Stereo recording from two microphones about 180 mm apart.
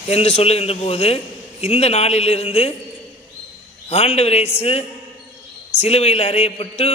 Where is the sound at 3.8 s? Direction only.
35° left (ahead or behind).